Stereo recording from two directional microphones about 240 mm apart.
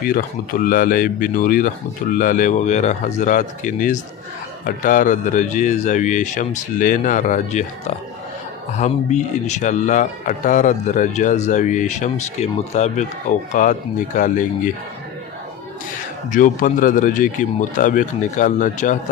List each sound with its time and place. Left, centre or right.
0.0 s speech: left
16.3 s speech: left